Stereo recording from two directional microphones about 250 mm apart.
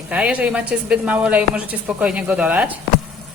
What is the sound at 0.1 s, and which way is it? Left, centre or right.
Speech, centre.